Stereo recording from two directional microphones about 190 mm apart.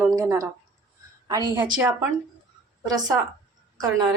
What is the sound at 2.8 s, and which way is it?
Speech, 20° right (ahead or behind).